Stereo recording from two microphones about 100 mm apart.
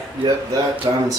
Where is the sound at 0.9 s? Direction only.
45° right (ahead or behind).